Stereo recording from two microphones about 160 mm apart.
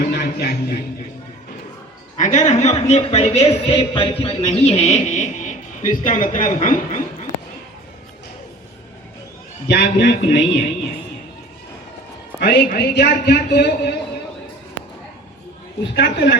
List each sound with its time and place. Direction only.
0.0 s music: 90° left
2.1 s a man's voice: 50° left (ahead or behind)
9.6 s a man's voice: 90° left
12.4 s a man's voice: 85° left